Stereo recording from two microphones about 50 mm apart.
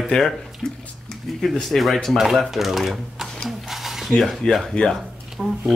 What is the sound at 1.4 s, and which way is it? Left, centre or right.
Speech, centre.